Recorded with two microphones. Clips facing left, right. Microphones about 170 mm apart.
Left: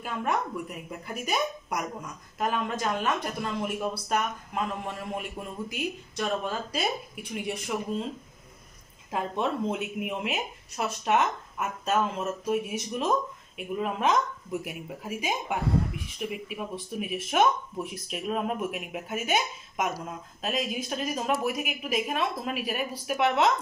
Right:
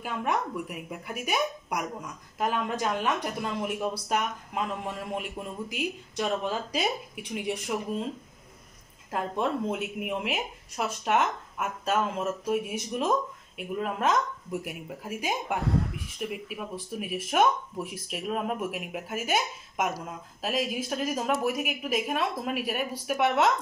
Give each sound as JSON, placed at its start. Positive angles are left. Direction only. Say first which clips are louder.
{"t": 0.0, "sound": "a woman's voice", "louder": "even", "side_deg": -10}
{"t": 9.1, "sound": "speech", "louder": "even", "side_deg": -5}